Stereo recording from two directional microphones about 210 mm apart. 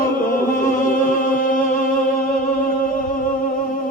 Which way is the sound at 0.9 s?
40° left (ahead or behind).